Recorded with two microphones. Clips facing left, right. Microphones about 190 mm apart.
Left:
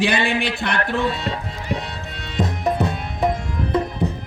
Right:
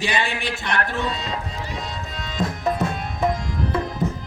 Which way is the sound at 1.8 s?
65° left (ahead or behind).